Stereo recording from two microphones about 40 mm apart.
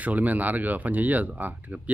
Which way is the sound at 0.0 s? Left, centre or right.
Right.